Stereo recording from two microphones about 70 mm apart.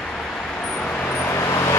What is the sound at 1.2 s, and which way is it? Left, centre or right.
Vehicle, left.